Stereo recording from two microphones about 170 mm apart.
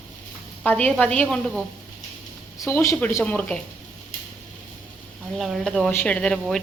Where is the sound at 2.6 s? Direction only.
20° left (ahead or behind).